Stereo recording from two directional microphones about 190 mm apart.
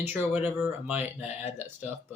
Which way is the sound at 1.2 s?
35° left (ahead or behind).